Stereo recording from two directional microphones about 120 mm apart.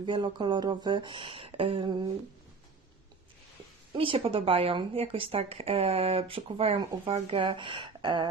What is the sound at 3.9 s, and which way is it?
Speech, 50° right (ahead or behind).